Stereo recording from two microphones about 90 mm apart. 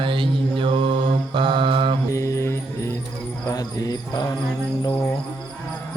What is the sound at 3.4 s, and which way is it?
Cricket, 45° left (ahead or behind).